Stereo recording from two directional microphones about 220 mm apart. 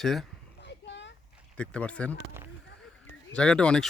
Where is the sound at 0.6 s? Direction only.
55° left (ahead or behind).